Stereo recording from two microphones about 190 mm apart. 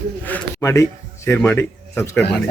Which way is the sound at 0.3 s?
10° left (ahead or behind).